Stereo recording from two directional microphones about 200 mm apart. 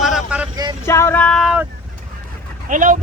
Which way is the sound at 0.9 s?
15° left (ahead or behind).